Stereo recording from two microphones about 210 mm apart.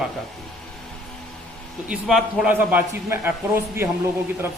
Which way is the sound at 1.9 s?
Centre (ahead or behind).